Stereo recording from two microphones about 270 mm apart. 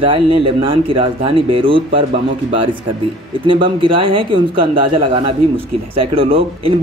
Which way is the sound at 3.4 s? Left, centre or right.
Centre.